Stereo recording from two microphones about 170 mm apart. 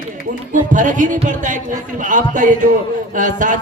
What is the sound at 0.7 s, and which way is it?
Speech, 50° right (ahead or behind).